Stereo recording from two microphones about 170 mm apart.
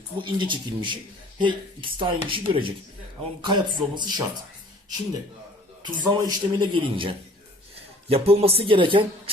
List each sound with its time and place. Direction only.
0.2 s speech: 30° right (ahead or behind)
5.8 s speech: 25° right (ahead or behind)